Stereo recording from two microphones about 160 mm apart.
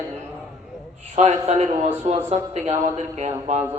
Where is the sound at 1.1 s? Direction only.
45° right (ahead or behind).